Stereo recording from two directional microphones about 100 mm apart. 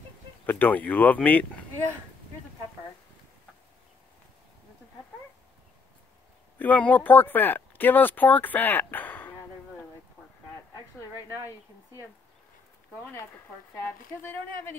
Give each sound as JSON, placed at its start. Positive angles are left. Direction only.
{"t": 0.5, "sound": "speech", "side_deg": 15}
{"t": 6.6, "sound": "speech", "side_deg": 15}
{"t": 11.4, "sound": "speech", "side_deg": 35}